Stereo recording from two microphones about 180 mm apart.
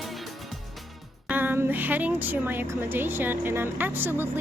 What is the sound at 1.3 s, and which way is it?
Speech, 10° right (ahead or behind).